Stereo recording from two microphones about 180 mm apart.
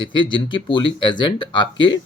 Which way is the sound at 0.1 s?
25° left (ahead or behind).